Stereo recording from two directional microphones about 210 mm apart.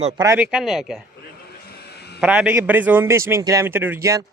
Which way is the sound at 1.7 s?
50° left (ahead or behind).